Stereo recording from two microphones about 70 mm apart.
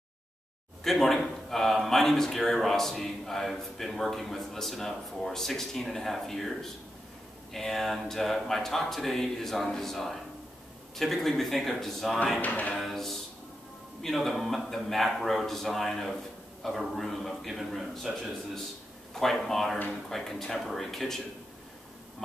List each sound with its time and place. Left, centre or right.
0.8 s a man's voice: centre
12.4 s speech: left
12.7 s music: centre
14.0 s a man's voice: centre